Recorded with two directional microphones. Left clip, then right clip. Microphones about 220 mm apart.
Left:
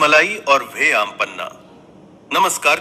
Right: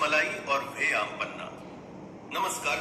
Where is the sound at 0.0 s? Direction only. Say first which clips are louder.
Left 13 dB; 55° left (ahead or behind).